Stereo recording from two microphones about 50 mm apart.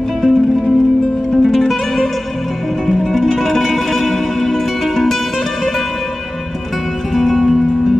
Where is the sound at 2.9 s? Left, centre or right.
Centre.